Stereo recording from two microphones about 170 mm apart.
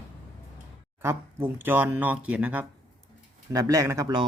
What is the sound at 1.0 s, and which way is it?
Speech, 15° right (ahead or behind).